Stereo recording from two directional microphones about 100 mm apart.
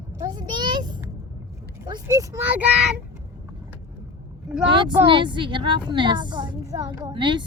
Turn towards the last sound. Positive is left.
turn(degrees=-55)  # may be behind; listen again after turning